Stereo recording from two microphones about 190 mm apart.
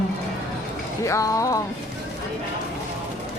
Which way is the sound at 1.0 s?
15° left (ahead or behind).